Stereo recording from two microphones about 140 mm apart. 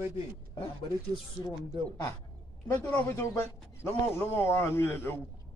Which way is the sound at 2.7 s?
15° left (ahead or behind).